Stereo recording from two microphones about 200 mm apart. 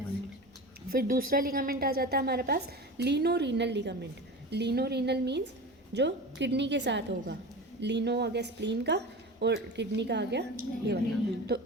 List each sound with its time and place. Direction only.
0.9 s a woman's voice: 45° right (ahead or behind)